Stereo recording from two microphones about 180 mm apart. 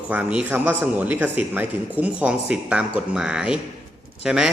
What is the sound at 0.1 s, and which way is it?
A man's voice, 5° right (ahead or behind).